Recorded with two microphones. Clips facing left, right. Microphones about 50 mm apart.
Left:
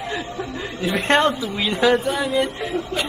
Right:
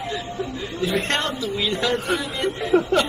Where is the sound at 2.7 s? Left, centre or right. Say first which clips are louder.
Right 10 dB; right.